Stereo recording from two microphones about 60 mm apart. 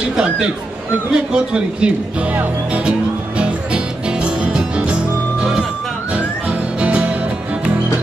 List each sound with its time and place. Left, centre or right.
0.1 s speech: centre
2.3 s music: right
6.8 s music: centre